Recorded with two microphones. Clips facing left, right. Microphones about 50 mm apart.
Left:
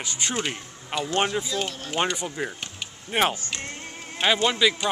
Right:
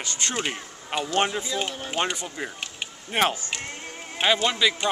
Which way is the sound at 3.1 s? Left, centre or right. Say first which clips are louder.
Even; centre.